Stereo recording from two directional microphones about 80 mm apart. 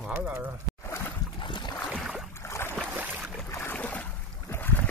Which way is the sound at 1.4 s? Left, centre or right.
Left.